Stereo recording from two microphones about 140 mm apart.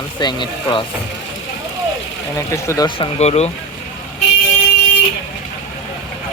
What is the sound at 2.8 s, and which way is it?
Speech, 35° left (ahead or behind).